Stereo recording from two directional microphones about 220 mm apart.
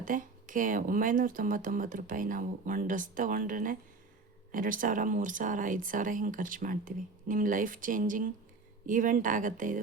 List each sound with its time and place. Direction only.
0.0 s speech: 35° right (ahead or behind)